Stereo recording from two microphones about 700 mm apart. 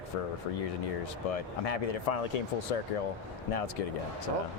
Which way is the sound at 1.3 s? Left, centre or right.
Left.